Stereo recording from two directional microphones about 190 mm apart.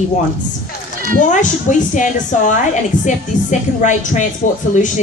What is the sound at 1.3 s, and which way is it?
A woman's voice, 40° left (ahead or behind).